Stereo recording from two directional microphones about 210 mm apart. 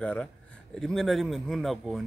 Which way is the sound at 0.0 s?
5° left (ahead or behind).